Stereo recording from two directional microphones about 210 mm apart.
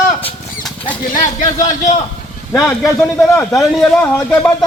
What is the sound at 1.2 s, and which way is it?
Speech, 35° left (ahead or behind).